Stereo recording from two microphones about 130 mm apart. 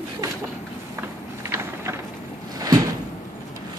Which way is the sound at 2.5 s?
30° right (ahead or behind).